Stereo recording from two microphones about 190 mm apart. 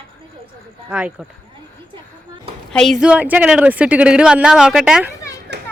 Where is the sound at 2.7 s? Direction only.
5° left (ahead or behind).